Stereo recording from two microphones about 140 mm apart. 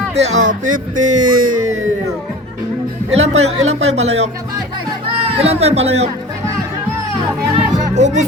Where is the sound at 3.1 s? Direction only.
50° right (ahead or behind).